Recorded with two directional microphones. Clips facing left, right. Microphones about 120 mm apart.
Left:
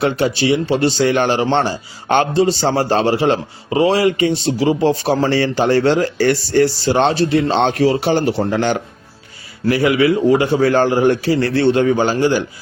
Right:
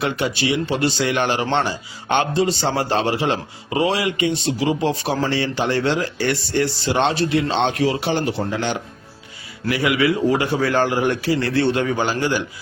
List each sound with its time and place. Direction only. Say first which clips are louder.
0.0 s a man's voice: left 5 dB; 30° left (ahead or behind); by 8.8 s 45° left (ahead or behind)
9.6 s a man's voice: left 5 dB; 35° left (ahead or behind)